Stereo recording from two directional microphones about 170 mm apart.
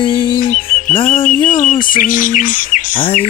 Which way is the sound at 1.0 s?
55° left (ahead or behind).